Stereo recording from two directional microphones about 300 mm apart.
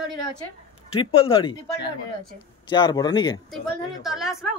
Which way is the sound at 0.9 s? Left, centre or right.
Centre.